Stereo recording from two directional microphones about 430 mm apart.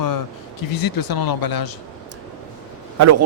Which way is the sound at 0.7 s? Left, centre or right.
Left.